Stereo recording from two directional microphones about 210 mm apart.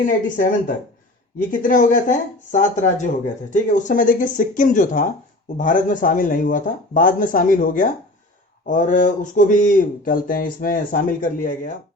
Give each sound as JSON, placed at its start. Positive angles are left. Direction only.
{"t": 0.0, "sound": "speech", "side_deg": 40}